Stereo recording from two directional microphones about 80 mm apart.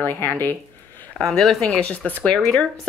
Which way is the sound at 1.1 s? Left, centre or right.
Centre.